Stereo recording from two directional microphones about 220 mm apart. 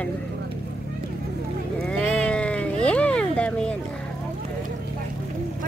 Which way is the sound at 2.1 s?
5° left (ahead or behind).